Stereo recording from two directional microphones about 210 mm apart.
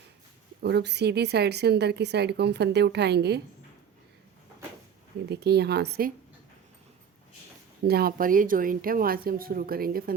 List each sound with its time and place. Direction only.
0.6 s speech: 55° right (ahead or behind)
5.3 s speech: 50° right (ahead or behind)
7.9 s speech: 45° right (ahead or behind)